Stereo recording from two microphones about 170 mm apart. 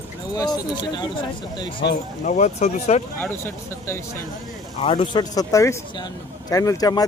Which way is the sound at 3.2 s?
15° left (ahead or behind).